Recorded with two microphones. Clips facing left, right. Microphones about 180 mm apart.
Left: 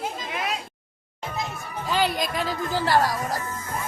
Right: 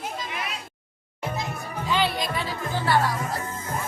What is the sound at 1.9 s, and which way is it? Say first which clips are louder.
Speech: left 1 dB; 45° left (ahead or behind).